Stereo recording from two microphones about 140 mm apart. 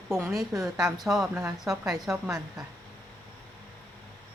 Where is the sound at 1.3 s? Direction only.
15° right (ahead or behind).